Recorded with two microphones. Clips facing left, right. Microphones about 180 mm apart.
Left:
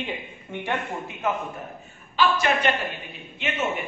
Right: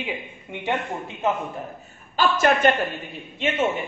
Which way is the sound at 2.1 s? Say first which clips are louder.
Right 2 dB; 45° right (ahead or behind).